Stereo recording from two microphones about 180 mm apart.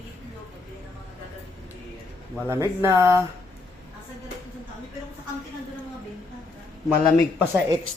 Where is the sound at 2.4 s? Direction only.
15° right (ahead or behind).